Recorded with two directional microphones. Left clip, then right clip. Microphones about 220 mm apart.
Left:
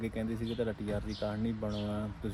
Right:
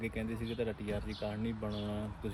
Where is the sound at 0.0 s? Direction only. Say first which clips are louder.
Left 2 dB; 10° left (ahead or behind).